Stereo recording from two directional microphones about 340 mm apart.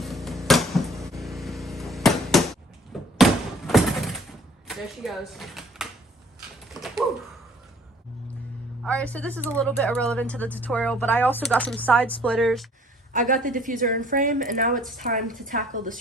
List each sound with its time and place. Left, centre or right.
0.0 s a sound: centre
4.7 s speech: centre
6.7 s typing: centre
8.8 s speech: centre
13.1 s a woman's voice: right